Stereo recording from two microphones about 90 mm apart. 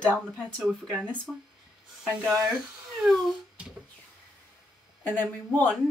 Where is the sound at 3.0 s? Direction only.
Centre (ahead or behind).